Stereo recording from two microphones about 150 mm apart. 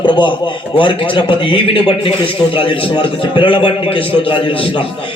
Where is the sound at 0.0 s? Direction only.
30° left (ahead or behind).